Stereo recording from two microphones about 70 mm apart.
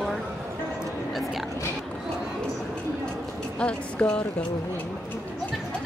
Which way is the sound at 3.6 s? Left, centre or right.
Centre.